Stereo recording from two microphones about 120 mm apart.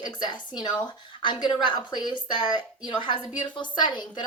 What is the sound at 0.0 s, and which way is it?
Speech, 40° left (ahead or behind).